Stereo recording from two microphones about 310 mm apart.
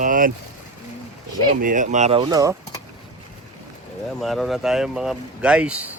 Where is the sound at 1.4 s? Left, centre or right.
Right.